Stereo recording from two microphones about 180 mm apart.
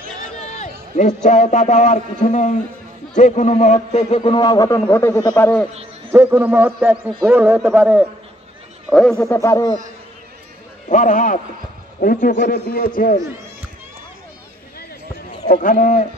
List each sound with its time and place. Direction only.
0.4 s a man's voice: 40° left (ahead or behind); by 5.7 s 10° left (ahead or behind)
6.1 s a man's voice: 10° right (ahead or behind)
9.3 s speech: 15° left (ahead or behind)
10.9 s a man's voice: 45° left (ahead or behind)
15.5 s a man's voice: 50° left (ahead or behind)